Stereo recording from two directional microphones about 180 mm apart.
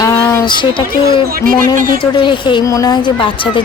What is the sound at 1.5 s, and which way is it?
Speech, 50° right (ahead or behind).